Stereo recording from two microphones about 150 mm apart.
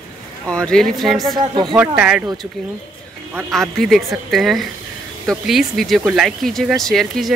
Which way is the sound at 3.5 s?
Centre (ahead or behind).